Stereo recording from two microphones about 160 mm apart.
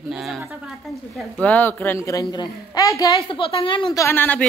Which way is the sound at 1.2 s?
10° left (ahead or behind).